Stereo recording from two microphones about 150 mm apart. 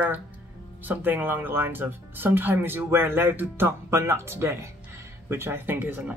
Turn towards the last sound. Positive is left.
turn(degrees=-15)  # may be behind; listen again after turning